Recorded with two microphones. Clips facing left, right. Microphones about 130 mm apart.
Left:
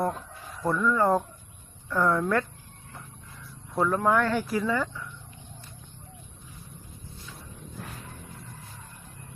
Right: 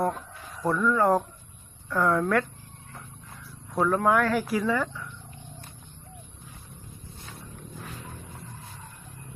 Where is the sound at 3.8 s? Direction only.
10° right (ahead or behind).